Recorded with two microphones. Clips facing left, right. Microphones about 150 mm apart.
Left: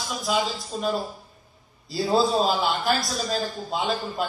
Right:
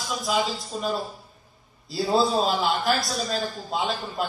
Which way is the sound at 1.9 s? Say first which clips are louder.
Left 1 dB; centre (ahead or behind).